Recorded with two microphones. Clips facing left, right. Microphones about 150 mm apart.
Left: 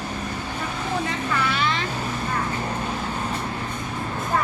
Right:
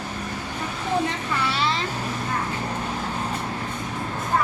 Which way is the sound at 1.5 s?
30° right (ahead or behind).